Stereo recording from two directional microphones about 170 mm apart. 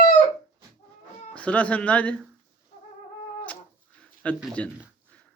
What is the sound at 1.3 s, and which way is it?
Speech, 10° left (ahead or behind).